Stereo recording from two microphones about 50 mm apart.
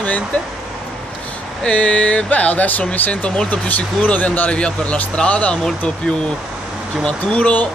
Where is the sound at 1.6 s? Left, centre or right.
Left.